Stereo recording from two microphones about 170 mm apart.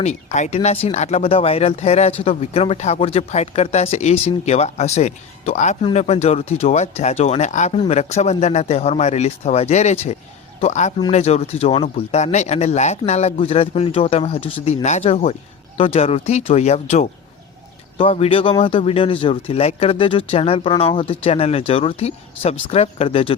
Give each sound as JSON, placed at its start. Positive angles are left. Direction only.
{"t": 0.0, "sound": "a man's voice", "side_deg": 45}